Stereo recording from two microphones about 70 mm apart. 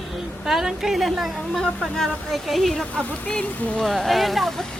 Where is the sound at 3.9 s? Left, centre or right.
Centre.